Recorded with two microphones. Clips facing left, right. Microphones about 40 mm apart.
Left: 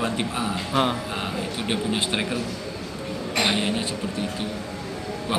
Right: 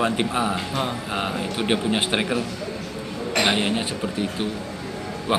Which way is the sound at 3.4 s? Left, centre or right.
Right.